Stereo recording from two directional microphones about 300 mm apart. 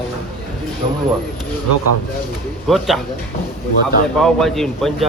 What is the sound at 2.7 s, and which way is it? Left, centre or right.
Speech, centre.